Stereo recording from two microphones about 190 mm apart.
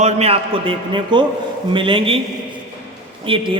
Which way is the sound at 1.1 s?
25° right (ahead or behind).